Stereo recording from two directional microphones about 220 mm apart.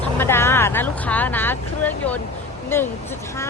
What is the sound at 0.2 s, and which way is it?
A woman's voice, 10° left (ahead or behind).